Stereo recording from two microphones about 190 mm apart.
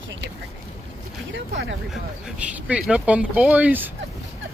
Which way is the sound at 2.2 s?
5° right (ahead or behind).